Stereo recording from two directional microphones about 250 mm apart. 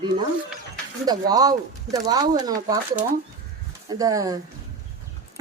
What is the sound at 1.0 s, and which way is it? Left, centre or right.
A woman's voice, centre.